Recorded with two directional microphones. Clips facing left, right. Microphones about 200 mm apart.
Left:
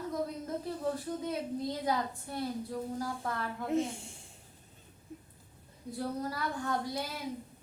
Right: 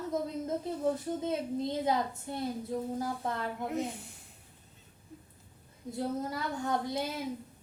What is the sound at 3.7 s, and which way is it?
Speech, 25° left (ahead or behind).